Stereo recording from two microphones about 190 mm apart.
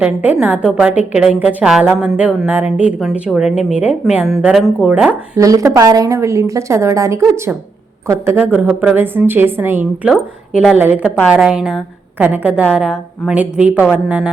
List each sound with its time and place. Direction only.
0.0 s a woman's voice: 5° right (ahead or behind)
5.4 s a woman's voice: 15° right (ahead or behind)